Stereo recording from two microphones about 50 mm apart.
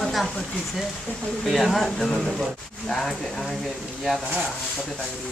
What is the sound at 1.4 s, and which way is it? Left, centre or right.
Speech, centre.